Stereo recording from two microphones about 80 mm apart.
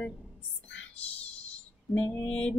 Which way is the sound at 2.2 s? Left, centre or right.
Centre.